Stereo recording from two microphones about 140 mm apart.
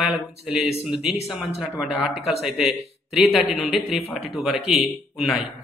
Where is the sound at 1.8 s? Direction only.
5° right (ahead or behind).